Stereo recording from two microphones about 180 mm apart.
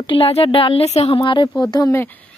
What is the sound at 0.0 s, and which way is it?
Speech, 30° left (ahead or behind).